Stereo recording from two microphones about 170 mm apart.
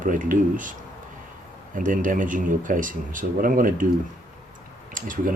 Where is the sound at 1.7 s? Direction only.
50° right (ahead or behind).